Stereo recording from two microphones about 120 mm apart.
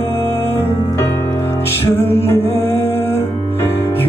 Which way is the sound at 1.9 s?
20° left (ahead or behind).